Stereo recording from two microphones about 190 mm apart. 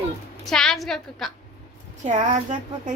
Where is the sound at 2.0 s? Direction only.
40° right (ahead or behind).